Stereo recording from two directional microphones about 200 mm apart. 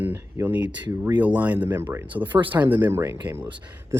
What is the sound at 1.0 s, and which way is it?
Speech, 10° right (ahead or behind).